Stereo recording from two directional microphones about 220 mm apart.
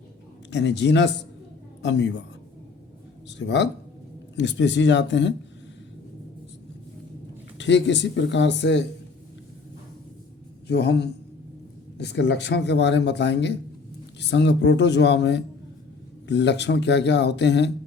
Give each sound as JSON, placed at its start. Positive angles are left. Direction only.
{"t": 0.5, "sound": "speech", "side_deg": 50}
{"t": 3.2, "sound": "speech", "side_deg": 50}
{"t": 7.6, "sound": "speech", "side_deg": 55}
{"t": 10.7, "sound": "speech", "side_deg": 50}